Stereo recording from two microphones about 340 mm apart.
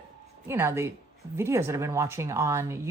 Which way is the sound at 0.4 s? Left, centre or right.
Centre.